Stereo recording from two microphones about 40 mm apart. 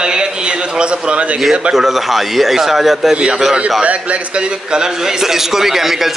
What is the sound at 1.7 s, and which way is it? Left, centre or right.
A man's voice, centre.